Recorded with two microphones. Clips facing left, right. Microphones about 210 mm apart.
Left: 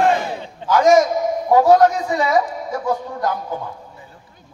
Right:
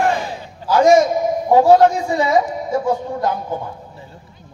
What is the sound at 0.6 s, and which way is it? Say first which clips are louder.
A man's voice: right 1 dB; 30° right (ahead or behind).